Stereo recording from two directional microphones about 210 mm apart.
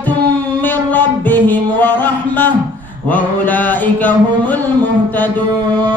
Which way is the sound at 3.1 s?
10° left (ahead or behind).